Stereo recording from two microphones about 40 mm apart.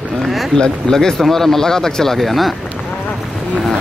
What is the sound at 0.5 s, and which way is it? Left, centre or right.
Speech, centre.